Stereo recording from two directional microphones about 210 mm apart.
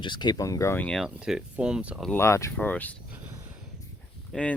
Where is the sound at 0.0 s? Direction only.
20° left (ahead or behind).